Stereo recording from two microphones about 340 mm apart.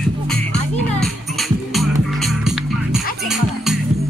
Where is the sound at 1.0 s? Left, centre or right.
Centre.